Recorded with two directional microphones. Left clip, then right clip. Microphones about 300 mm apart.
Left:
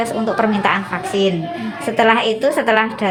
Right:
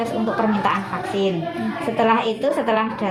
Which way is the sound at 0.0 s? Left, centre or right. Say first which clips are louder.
Left 4 dB; left.